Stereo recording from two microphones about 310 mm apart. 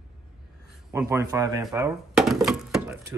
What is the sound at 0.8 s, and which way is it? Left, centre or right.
A man's voice, centre.